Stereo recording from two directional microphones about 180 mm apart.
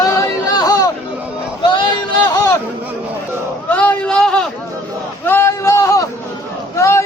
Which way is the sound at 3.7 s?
10° left (ahead or behind).